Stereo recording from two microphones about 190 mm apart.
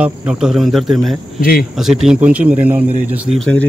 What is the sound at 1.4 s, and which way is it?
Speech, 50° left (ahead or behind).